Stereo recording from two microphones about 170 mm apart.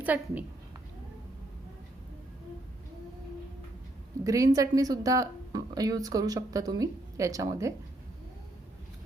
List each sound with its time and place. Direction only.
0.0 s a woman's voice: 10° right (ahead or behind)
4.2 s speech: 20° right (ahead or behind)